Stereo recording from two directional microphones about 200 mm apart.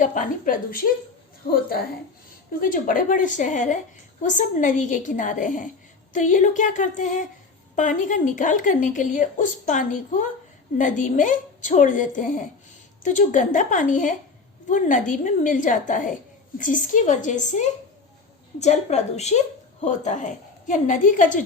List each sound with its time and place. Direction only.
0.0 s a woman's voice: 40° left (ahead or behind)
2.6 s speech: 40° left (ahead or behind)